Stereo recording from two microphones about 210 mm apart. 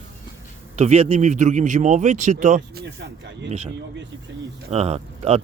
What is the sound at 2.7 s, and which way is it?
Speech, 55° right (ahead or behind).